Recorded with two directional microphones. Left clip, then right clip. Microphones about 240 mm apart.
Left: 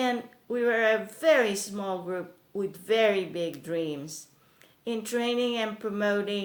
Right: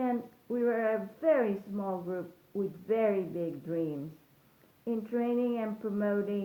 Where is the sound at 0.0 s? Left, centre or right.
Left.